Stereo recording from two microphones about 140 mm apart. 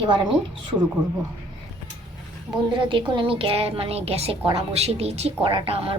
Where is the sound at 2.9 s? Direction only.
40° right (ahead or behind).